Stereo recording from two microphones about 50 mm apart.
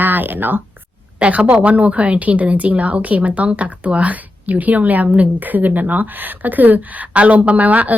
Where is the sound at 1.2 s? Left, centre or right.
Right.